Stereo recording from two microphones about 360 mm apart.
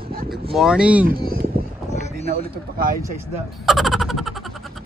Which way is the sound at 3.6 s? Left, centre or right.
Centre.